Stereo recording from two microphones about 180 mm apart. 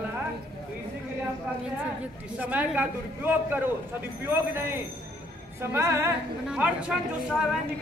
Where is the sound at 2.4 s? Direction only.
10° right (ahead or behind).